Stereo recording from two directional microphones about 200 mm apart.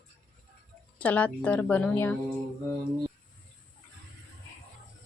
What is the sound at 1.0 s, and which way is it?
Speech, 5° left (ahead or behind).